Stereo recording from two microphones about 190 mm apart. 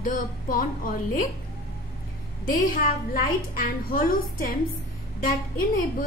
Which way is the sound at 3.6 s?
50° left (ahead or behind).